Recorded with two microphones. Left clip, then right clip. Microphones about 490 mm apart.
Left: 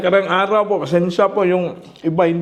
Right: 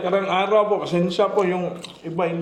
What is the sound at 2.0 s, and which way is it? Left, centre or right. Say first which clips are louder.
Speech: left 8 dB; left.